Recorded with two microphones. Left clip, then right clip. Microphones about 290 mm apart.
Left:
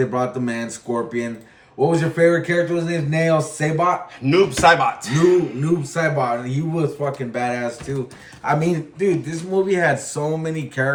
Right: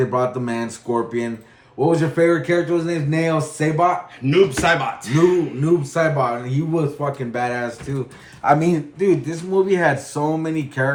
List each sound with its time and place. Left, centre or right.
0.0 s speech: centre
4.2 s speech: centre
5.6 s speech: centre